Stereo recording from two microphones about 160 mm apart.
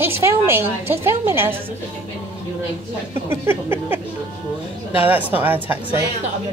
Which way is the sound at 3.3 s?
15° right (ahead or behind).